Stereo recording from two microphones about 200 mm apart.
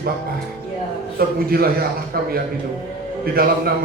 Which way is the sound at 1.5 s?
50° right (ahead or behind).